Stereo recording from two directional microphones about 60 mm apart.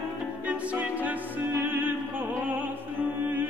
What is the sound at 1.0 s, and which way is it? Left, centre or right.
Music, right.